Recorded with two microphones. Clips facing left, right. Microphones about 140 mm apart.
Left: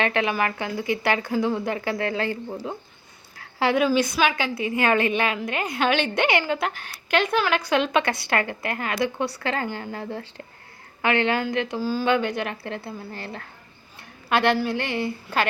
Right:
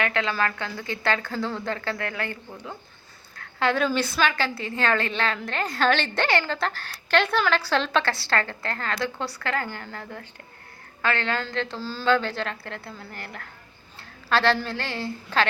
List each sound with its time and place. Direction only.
0.0 s a woman's voice: 20° left (ahead or behind)
3.6 s a woman's voice: 15° left (ahead or behind)